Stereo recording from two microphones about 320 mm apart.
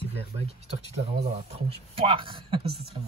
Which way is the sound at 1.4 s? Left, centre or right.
Centre.